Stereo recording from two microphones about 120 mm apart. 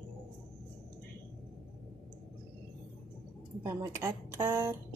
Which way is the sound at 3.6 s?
25° right (ahead or behind).